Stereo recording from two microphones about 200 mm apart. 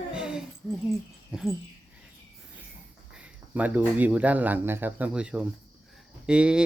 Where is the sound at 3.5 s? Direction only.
10° right (ahead or behind).